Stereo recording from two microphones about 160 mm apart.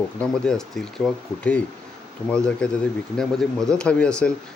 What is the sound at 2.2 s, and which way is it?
Speech, 5° left (ahead or behind).